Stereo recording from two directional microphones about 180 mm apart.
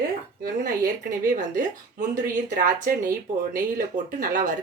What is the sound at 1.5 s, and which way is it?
Speech, 45° right (ahead or behind).